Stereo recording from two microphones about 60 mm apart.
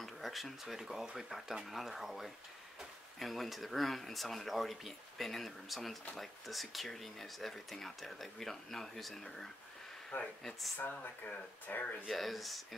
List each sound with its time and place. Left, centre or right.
0.0 s speech: centre
10.1 s speech: left
12.1 s speech: centre